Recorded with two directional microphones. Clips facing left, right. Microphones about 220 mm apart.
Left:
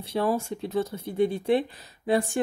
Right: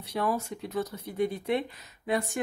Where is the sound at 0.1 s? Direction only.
30° left (ahead or behind).